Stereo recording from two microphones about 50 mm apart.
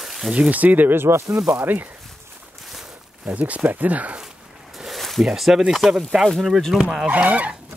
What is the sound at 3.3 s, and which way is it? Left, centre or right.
Speech, right.